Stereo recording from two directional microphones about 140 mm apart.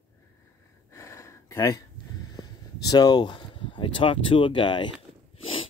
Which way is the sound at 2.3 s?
30° left (ahead or behind).